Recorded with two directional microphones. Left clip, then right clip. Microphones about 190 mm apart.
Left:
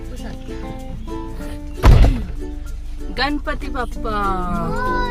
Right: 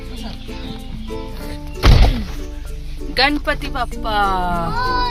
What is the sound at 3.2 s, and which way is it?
Speech, 10° left (ahead or behind).